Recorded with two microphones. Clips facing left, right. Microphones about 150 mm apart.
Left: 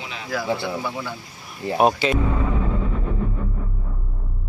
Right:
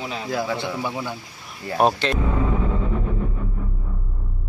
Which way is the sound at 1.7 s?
5° left (ahead or behind).